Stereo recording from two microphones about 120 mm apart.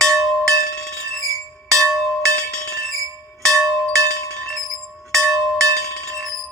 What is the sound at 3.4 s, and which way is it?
Bell, 5° left (ahead or behind).